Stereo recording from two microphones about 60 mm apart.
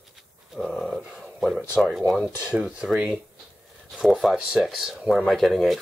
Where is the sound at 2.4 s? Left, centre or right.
Centre.